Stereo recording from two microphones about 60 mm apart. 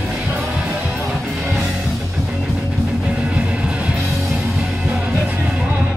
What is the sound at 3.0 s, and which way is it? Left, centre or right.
Music, centre.